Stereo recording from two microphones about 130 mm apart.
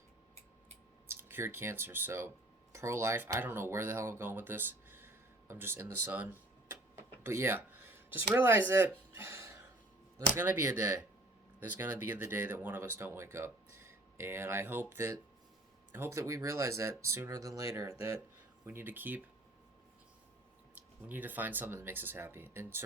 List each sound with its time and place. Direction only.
1.1 s speech: 15° right (ahead or behind)
9.1 s a sound: 20° right (ahead or behind)
10.2 s speech: 20° right (ahead or behind)
20.7 s speech: 15° right (ahead or behind)